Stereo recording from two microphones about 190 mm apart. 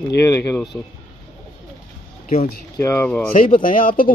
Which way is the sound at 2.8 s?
15° left (ahead or behind).